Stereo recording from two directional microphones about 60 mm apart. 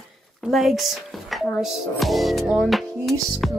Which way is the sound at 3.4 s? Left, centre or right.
Centre.